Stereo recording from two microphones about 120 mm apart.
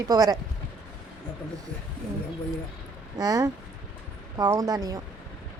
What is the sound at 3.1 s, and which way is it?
Speech, 30° right (ahead or behind).